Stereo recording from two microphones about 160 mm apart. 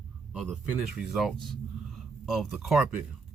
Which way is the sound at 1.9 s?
Centre (ahead or behind).